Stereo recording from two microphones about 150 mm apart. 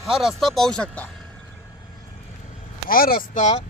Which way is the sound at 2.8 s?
75° left (ahead or behind).